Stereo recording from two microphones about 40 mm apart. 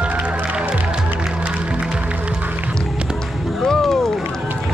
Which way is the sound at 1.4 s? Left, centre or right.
Right.